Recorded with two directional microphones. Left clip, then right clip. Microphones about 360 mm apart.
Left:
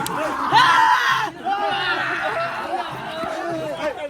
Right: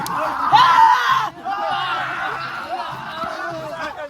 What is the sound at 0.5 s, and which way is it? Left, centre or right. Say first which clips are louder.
Music: right 3 dB; right.